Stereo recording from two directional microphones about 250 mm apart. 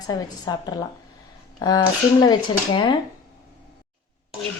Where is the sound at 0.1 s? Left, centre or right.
Centre.